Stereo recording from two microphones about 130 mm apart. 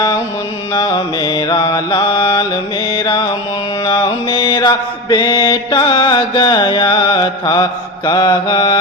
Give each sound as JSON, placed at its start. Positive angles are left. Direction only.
{"t": 0.7, "sound": "mantra", "side_deg": 30}